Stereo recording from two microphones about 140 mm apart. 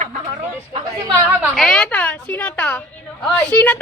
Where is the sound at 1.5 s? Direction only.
5° left (ahead or behind).